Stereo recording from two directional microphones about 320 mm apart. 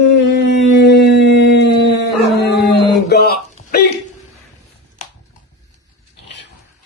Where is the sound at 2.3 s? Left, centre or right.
Left.